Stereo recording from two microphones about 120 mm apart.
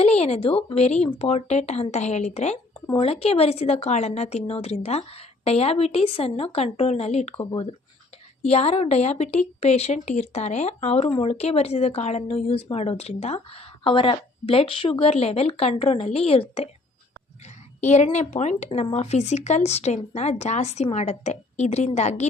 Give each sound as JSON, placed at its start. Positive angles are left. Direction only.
{"t": 0.0, "sound": "speech", "side_deg": 60}
{"t": 3.0, "sound": "speech", "side_deg": 55}
{"t": 7.5, "sound": "speech", "side_deg": 50}
{"t": 17.7, "sound": "speech", "side_deg": 75}